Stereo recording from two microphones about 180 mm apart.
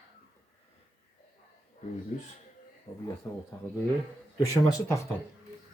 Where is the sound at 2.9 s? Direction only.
35° left (ahead or behind).